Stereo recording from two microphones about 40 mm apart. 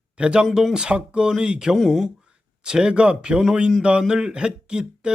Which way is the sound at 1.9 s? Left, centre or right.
Centre.